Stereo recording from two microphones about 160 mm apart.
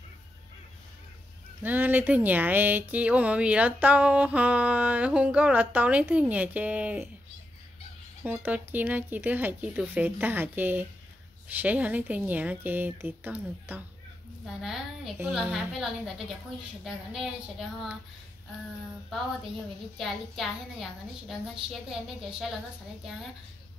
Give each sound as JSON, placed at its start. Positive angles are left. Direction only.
{"t": 1.6, "sound": "speech", "side_deg": -10}
{"t": 8.2, "sound": "a woman's voice", "side_deg": -15}
{"t": 20.0, "sound": "a woman's voice", "side_deg": 0}